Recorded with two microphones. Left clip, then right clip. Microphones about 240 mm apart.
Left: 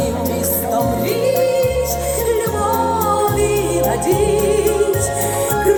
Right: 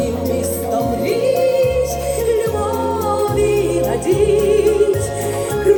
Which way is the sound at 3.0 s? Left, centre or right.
Left.